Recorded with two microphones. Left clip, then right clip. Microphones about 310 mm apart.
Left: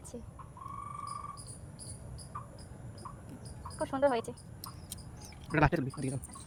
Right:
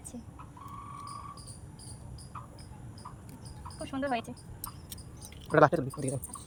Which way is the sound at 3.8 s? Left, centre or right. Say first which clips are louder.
Left 4 dB; centre.